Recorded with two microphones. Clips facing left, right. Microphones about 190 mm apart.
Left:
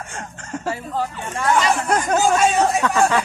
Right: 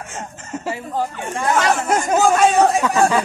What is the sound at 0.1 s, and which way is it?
Speech, 5° right (ahead or behind).